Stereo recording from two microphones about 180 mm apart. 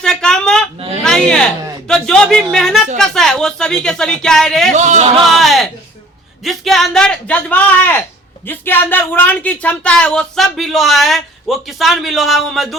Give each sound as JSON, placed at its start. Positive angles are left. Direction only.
{"t": 0.0, "sound": "a sound", "side_deg": 5}
{"t": 1.9, "sound": "speech", "side_deg": 5}
{"t": 4.7, "sound": "speech", "side_deg": -40}
{"t": 5.2, "sound": "speech", "side_deg": 0}